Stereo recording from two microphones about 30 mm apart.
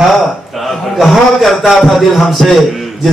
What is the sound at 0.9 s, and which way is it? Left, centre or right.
A man's voice, centre.